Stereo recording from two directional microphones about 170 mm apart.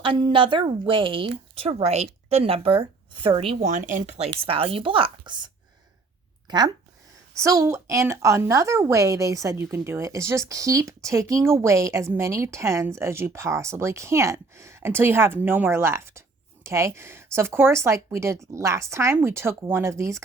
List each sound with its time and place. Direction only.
0.0 s speech: 30° right (ahead or behind)
3.7 s speech: 50° right (ahead or behind)
4.2 s speech: 35° right (ahead or behind)
6.5 s speech: 25° right (ahead or behind)